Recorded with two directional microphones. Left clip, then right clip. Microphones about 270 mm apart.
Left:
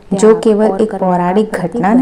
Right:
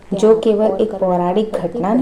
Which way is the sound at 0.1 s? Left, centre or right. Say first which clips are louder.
Left 3 dB; left.